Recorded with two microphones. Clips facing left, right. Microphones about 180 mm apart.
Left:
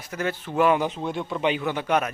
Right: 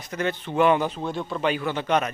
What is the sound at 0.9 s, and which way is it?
Speech, 20° left (ahead or behind).